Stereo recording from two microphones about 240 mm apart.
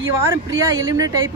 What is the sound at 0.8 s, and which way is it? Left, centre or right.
Speech, centre.